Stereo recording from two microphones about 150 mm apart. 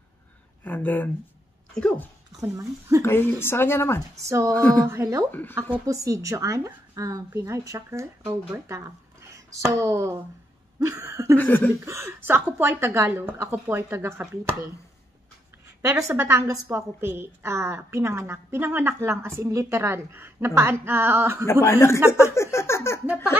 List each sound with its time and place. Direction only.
0.7 s speech: 10° left (ahead or behind)
2.4 s a woman's voice: 20° right (ahead or behind)
3.0 s speech: 15° left (ahead or behind)
4.8 s a woman's voice: 20° right (ahead or behind)
11.3 s speech: 10° left (ahead or behind)
11.8 s a woman's voice: 20° right (ahead or behind)
15.9 s a woman's voice: 20° right (ahead or behind)
21.5 s speech: 15° left (ahead or behind)